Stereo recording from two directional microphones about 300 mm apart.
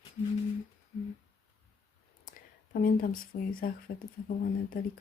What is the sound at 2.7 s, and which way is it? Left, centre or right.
Speech, left.